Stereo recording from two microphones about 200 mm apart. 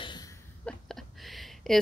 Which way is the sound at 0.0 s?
20° left (ahead or behind).